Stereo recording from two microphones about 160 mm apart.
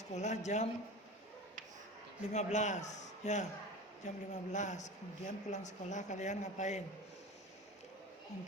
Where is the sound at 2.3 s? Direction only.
50° left (ahead or behind).